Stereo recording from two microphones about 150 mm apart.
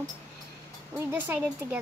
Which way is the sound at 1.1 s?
10° right (ahead or behind).